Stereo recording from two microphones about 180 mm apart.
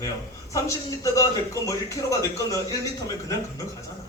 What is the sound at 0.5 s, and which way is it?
A man's voice, 15° left (ahead or behind).